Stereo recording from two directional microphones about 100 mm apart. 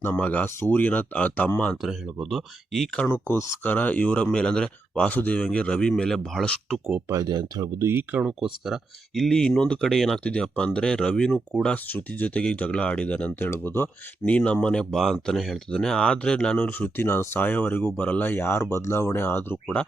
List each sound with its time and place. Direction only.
0.0 s speech: 20° left (ahead or behind)
2.3 s speech: centre (ahead or behind)
3.1 s speech: 25° left (ahead or behind); by 6.6 s 5° left (ahead or behind)
6.7 s speech: 10° right (ahead or behind)
7.1 s speech: 40° right (ahead or behind)
7.8 s speech: 25° right (ahead or behind)
8.2 s speech: 5° right (ahead or behind); by 19.5 s 20° left (ahead or behind)
19.6 s speech: 10° left (ahead or behind)